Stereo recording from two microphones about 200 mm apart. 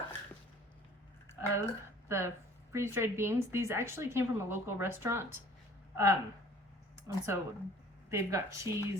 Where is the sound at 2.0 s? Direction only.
15° right (ahead or behind).